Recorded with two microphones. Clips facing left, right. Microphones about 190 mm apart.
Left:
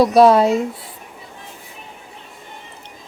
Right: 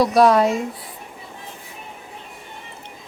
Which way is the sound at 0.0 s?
25° left (ahead or behind).